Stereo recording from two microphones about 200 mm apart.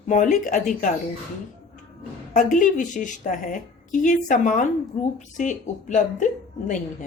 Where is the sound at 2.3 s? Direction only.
40° left (ahead or behind).